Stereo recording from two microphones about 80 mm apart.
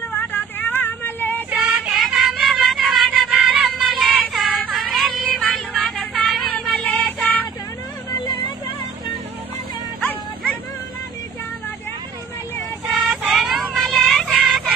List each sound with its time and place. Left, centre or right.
0.1 s vehicle: left
1.6 s music: centre
8.1 s vehicle: left
12.9 s child singing: centre